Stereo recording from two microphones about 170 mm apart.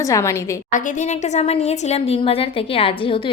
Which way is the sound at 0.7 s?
45° left (ahead or behind).